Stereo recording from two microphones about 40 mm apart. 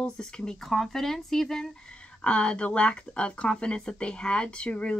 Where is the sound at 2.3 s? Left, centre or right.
Left.